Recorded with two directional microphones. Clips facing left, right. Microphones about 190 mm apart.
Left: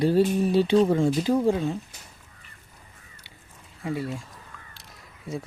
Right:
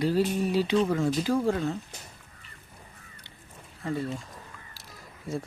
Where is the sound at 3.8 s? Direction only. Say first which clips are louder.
Left 1 dB; 10° left (ahead or behind).